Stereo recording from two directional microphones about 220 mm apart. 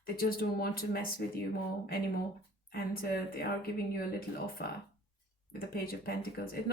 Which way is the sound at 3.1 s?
45° left (ahead or behind).